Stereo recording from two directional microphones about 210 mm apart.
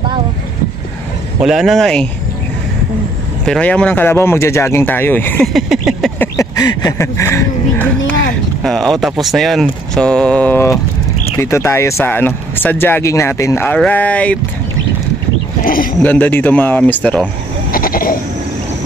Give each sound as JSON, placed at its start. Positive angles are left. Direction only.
{"t": 1.4, "sound": "speech", "side_deg": 0}
{"t": 3.4, "sound": "speech", "side_deg": 5}
{"t": 6.2, "sound": "a sound", "side_deg": 15}
{"t": 8.6, "sound": "speech", "side_deg": 0}
{"t": 15.6, "sound": "a sound", "side_deg": 40}
{"t": 16.0, "sound": "speech", "side_deg": 10}
{"t": 17.6, "sound": "goat", "side_deg": 45}